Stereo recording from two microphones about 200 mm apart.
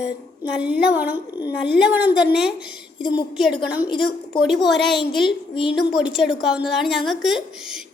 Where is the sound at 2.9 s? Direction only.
25° left (ahead or behind).